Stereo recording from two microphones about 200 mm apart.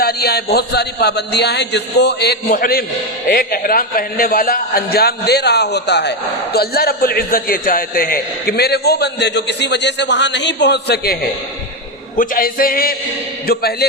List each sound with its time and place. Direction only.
0.0 s a man's voice: 50° left (ahead or behind)